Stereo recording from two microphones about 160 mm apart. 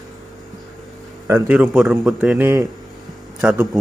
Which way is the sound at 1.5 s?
5° right (ahead or behind).